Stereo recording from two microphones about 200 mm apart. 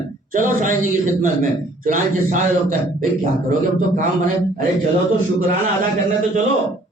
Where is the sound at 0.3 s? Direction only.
40° right (ahead or behind).